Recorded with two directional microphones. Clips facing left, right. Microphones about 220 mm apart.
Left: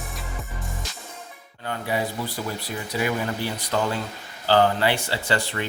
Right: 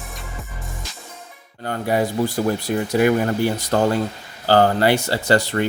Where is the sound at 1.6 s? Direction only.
45° right (ahead or behind).